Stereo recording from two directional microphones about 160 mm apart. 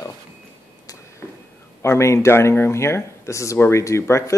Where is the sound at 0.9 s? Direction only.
20° left (ahead or behind).